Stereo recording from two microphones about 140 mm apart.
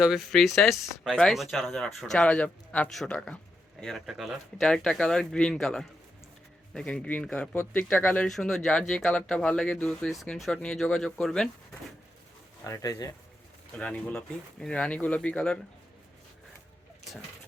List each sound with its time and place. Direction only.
0.0 s speech: centre (ahead or behind)
12.6 s speech: 20° left (ahead or behind)
13.7 s speech: 5° left (ahead or behind)